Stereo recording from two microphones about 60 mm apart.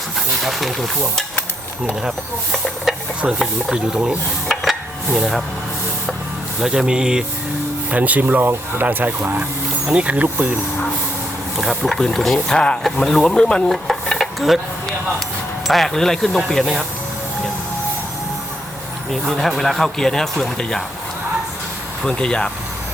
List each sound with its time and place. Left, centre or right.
0.4 s speech: centre
2.5 s speech: centre
3.7 s speech: centre
4.4 s a sound: centre
6.6 s speech: centre
7.9 s speech: right
11.5 s speech: centre
13.7 s stir: centre
15.6 s speech: centre
19.1 s speech: centre
22.0 s speech: centre